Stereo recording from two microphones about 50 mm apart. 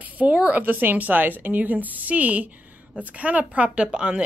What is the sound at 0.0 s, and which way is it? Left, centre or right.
Speech, right.